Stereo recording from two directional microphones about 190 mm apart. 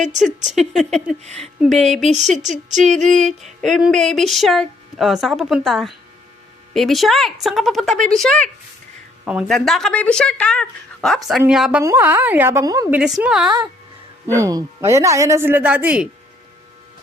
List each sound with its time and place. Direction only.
0.4 s speech: centre (ahead or behind)
2.6 s female singing: 40° right (ahead or behind)
2.9 s speech: 5° left (ahead or behind); by 13.0 s 15° right (ahead or behind)
13.0 s speech: 5° right (ahead or behind)
14.3 s speech: 15° right (ahead or behind)